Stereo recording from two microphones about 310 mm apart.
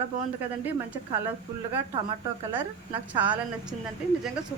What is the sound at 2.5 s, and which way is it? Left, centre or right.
A woman's voice, centre.